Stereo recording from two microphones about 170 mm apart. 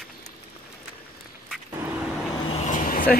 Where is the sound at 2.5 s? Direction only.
45° left (ahead or behind).